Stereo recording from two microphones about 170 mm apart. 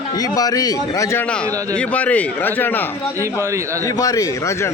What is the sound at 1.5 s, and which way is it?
Speech, 20° right (ahead or behind).